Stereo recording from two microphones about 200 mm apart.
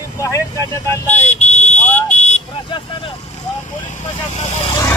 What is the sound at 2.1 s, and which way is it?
Vehicle, 35° left (ahead or behind).